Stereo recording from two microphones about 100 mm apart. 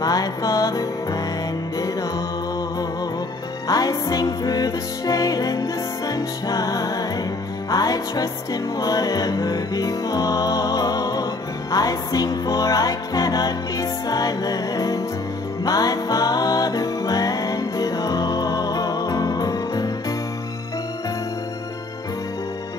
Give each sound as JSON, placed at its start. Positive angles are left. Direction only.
{"t": 0.0, "sound": "music", "side_deg": 40}
{"t": 3.6, "sound": "music", "side_deg": 40}